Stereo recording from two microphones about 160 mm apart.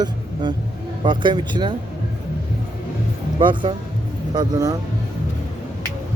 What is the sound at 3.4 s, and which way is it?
Speech, 30° right (ahead or behind).